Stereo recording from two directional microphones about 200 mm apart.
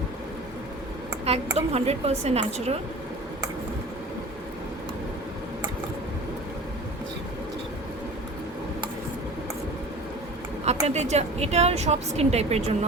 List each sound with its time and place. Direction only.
1.5 s a woman's voice: 30° right (ahead or behind)
10.7 s a woman's voice: 35° right (ahead or behind)